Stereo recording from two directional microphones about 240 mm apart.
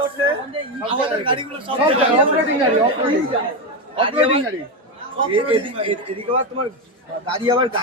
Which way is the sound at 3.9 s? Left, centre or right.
Right.